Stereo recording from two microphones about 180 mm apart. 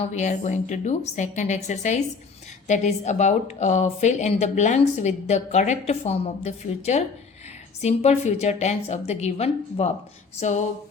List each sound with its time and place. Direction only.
0.0 s speech: 40° left (ahead or behind)